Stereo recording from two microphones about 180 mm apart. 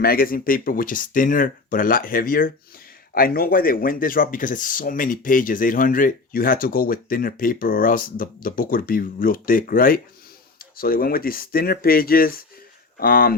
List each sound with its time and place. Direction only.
0.0 s speech: 55° left (ahead or behind)